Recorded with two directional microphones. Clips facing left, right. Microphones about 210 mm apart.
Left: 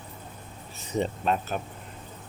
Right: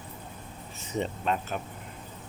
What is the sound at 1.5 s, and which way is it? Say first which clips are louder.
Speech: left 2 dB; 40° left (ahead or behind).